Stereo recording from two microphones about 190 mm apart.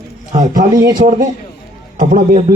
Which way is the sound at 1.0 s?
35° right (ahead or behind).